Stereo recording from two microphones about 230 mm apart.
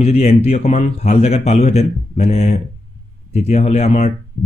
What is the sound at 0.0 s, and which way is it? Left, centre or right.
Speech, left.